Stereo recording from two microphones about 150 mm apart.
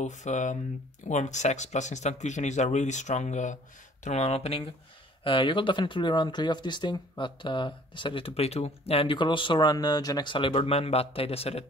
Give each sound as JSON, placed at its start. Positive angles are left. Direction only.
{"t": 0.0, "sound": "speech", "side_deg": 55}